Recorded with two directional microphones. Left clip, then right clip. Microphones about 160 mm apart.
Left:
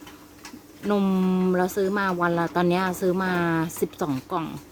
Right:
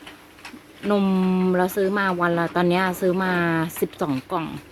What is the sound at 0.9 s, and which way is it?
Speech, 5° right (ahead or behind).